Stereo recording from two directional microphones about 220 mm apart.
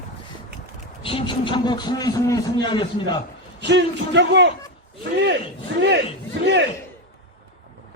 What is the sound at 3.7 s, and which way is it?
Speech, 55° right (ahead or behind).